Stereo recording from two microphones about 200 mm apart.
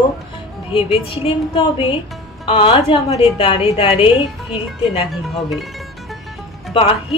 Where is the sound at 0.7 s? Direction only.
30° left (ahead or behind).